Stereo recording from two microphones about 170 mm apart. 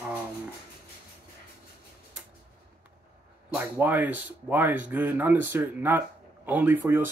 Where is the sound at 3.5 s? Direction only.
10° right (ahead or behind).